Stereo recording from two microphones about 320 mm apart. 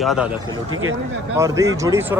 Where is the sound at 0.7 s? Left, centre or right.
Right.